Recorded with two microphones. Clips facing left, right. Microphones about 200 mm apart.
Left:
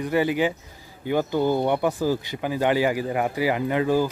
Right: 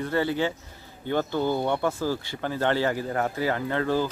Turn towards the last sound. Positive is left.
turn(degrees=15)  # may be behind; listen again after turning